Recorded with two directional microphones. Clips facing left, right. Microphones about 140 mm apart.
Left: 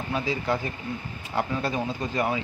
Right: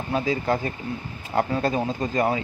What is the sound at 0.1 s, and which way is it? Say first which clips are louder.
Speech: right 4 dB; 45° right (ahead or behind).